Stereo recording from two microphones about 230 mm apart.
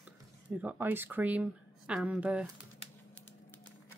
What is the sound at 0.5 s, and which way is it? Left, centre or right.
Speech, centre.